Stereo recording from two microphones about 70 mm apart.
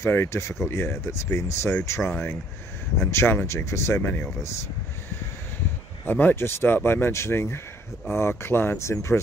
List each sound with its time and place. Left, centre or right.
0.0 s speech: left
6.0 s speech: left